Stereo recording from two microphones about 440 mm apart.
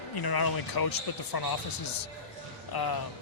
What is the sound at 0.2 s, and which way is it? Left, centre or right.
Speech, left.